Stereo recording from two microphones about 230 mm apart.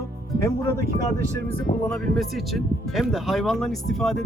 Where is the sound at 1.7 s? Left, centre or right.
Left.